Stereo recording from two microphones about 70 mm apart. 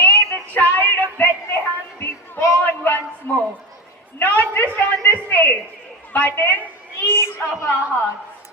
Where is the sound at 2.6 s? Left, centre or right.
Left.